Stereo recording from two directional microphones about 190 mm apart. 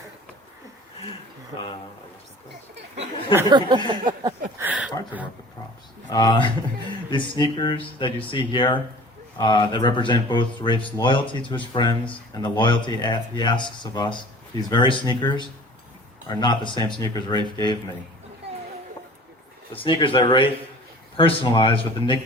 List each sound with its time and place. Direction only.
3.3 s a sound: 20° right (ahead or behind)
4.5 s speech: 10° right (ahead or behind)
6.1 s speech: 20° left (ahead or behind)
19.7 s speech: 25° left (ahead or behind)